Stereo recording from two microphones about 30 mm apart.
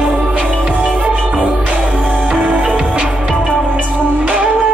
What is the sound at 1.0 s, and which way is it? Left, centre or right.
Music, right.